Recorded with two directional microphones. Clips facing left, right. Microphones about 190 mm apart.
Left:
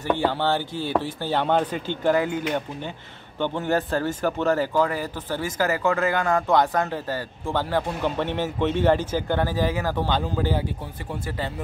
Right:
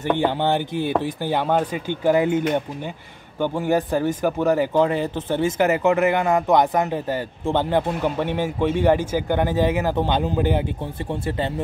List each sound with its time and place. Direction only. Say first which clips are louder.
0.0 s speech: right 2 dB; 20° right (ahead or behind)
8.0 s speech: right 2 dB; 10° right (ahead or behind)